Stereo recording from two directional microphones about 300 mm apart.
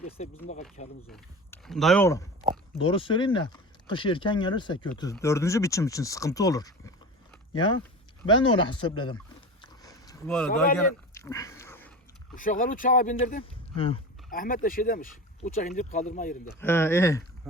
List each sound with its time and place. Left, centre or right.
0.2 s speech: left
1.1 s speech: centre
9.6 s a sound: centre
11.1 s dog: centre
12.3 s speech: left
16.6 s speech: centre
17.5 s a sound: centre